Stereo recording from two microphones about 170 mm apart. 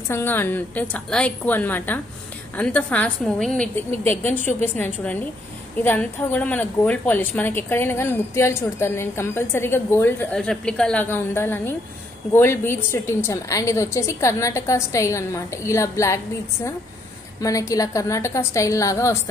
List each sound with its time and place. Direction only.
0.1 s a woman's voice: 10° left (ahead or behind)
17.4 s a woman's voice: 20° left (ahead or behind)